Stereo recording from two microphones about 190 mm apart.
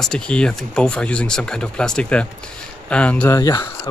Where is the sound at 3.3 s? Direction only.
20° left (ahead or behind).